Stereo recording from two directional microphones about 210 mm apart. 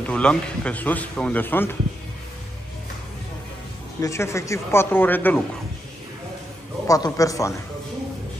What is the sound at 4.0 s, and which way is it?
A man's voice, 15° left (ahead or behind).